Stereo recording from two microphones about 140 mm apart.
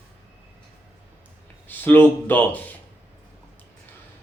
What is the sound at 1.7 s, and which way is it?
Speech, 15° left (ahead or behind).